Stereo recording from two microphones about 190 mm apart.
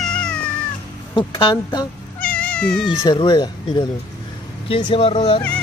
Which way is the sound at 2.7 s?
25° left (ahead or behind).